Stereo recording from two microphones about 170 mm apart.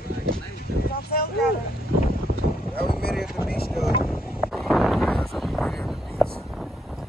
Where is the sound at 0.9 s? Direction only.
65° left (ahead or behind).